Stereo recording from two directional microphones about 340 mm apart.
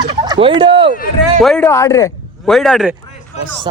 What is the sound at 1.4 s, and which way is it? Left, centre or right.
Speech, centre.